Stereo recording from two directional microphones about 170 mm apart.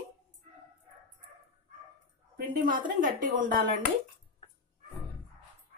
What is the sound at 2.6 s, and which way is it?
Speech, 55° right (ahead or behind).